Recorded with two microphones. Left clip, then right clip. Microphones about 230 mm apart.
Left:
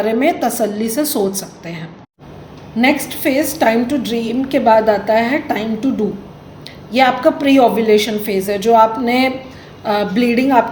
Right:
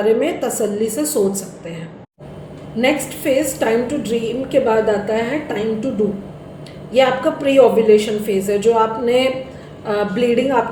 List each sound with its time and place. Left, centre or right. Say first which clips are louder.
0.0 s a woman's voice: left 1 dB; left
2.8 s a woman's voice: left 2 dB; left
6.9 s a woman's voice: left 2 dB; left